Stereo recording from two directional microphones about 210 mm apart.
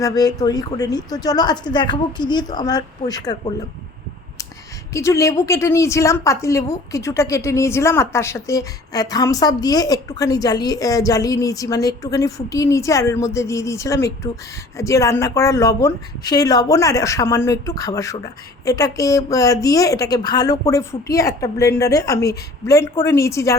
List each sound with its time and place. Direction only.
0.0 s a woman's voice: 20° left (ahead or behind)
4.9 s a woman's voice: 15° left (ahead or behind)